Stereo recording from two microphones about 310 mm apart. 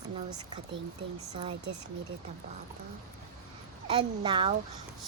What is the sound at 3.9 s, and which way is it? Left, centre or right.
Speech, centre.